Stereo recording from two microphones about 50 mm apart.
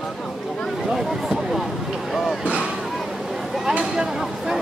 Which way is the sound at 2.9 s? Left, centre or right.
Centre.